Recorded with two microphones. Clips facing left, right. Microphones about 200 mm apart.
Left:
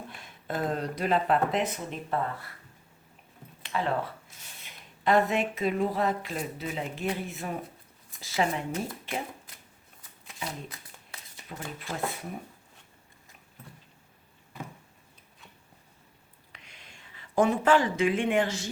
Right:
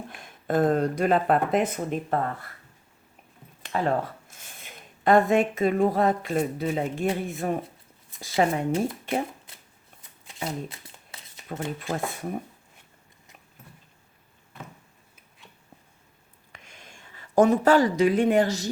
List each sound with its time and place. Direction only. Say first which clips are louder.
0.1 s speech: right 11 dB; 50° right (ahead or behind)
3.6 s speech: right 4 dB; 45° right (ahead or behind)
10.2 s shuffling cards: right 6 dB; 25° right (ahead or behind)
11.4 s speech: right 8 dB; 50° right (ahead or behind)
16.5 s a sound: right 4 dB; 45° right (ahead or behind)